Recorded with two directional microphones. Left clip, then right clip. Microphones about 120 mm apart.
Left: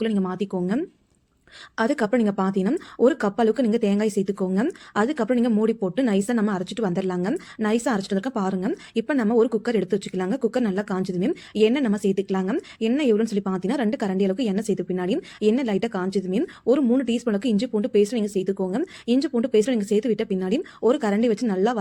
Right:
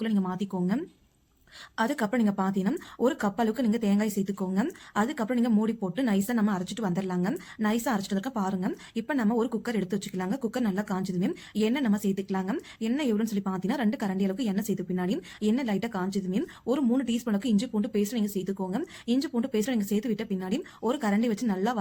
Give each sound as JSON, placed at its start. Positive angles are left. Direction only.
{"t": 0.0, "sound": "speech", "side_deg": 25}